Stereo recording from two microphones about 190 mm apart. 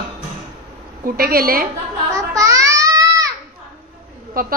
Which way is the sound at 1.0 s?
50° right (ahead or behind).